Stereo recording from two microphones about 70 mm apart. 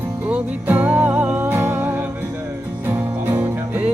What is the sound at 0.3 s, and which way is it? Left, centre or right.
Music, right.